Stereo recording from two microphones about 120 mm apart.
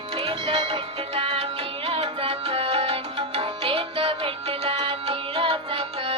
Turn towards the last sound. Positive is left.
turn(degrees=-50)  # may be behind; listen again after turning